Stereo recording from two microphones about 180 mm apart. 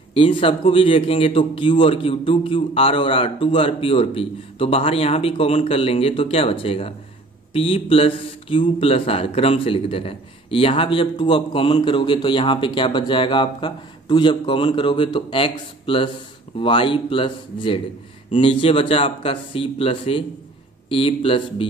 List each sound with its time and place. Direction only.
0.1 s speech: 30° left (ahead or behind)